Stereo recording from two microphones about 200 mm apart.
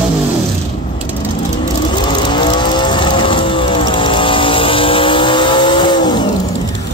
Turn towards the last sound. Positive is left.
turn(degrees=25)  # may be behind; listen again after turning